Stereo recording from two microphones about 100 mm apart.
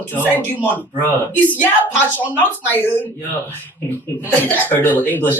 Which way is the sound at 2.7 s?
20° left (ahead or behind).